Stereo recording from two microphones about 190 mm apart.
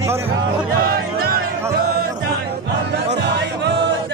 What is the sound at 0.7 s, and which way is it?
Music, 55° right (ahead or behind).